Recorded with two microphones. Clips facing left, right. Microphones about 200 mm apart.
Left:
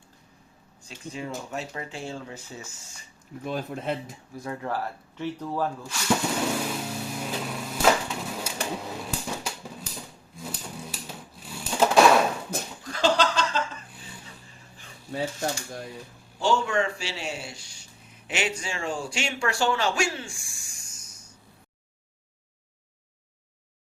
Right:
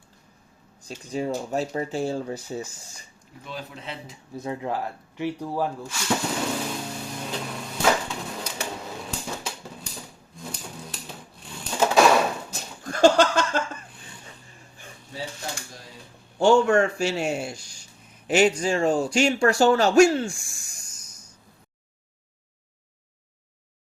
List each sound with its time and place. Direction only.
0.9 s speech: 40° right (ahead or behind)
3.4 s speech: 50° left (ahead or behind)
4.4 s speech: 20° right (ahead or behind)
6.7 s a sound: 5° left (ahead or behind)
12.8 s a sound: 50° right (ahead or behind)
15.1 s speech: 55° left (ahead or behind)
16.4 s speech: 50° right (ahead or behind)